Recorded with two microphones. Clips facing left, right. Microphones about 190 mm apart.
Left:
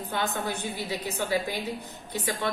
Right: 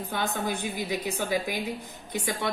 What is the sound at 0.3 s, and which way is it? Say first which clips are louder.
Speech: right 1 dB; 15° right (ahead or behind).